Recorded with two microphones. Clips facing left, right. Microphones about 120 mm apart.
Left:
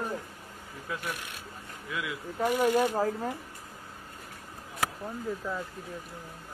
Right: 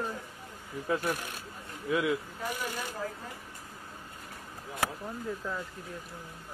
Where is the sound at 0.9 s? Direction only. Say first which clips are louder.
Right 6 dB; 40° right (ahead or behind).